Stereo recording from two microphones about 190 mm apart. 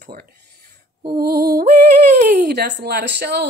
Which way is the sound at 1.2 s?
50° right (ahead or behind).